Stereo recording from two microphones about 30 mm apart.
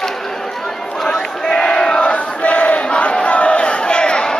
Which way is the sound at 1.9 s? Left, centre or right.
Left.